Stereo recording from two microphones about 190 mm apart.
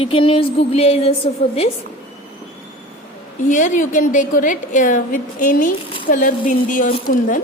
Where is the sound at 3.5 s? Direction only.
40° left (ahead or behind).